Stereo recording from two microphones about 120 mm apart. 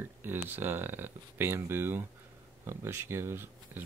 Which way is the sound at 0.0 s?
15° right (ahead or behind).